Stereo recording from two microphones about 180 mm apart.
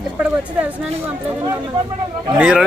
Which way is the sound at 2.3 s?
5° right (ahead or behind).